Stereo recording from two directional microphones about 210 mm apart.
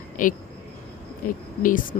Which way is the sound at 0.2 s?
40° left (ahead or behind).